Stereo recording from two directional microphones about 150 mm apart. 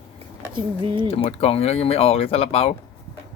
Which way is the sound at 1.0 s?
40° left (ahead or behind).